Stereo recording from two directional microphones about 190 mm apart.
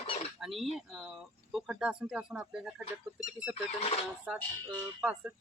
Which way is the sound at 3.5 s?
30° left (ahead or behind).